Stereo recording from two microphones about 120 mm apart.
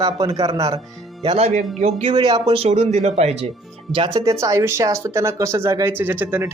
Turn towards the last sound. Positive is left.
turn(degrees=-15)  # may be behind; listen again after turning